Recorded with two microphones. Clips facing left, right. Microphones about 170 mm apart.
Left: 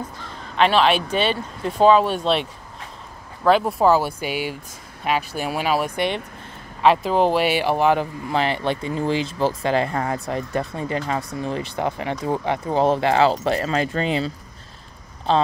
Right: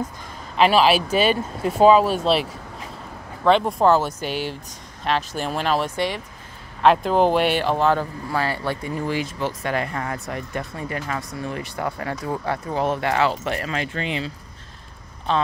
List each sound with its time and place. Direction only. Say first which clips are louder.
0.2 s speech: even; 5° right (ahead or behind)
3.4 s speech: even; 5° left (ahead or behind); by 15.4 s 30° left (ahead or behind)